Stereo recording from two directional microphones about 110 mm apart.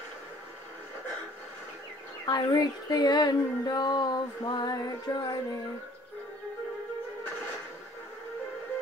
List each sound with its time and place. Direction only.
2.2 s female singing: 35° left (ahead or behind)